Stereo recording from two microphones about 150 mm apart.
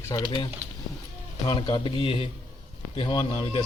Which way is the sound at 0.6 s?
50° right (ahead or behind).